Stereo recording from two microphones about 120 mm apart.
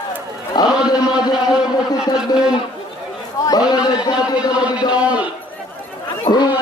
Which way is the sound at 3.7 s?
35° left (ahead or behind).